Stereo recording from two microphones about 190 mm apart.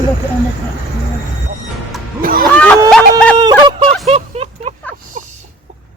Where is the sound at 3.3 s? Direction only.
25° right (ahead or behind).